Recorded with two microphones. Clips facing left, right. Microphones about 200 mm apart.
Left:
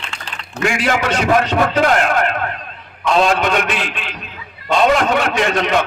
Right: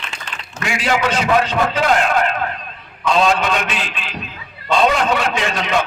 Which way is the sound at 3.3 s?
55° left (ahead or behind).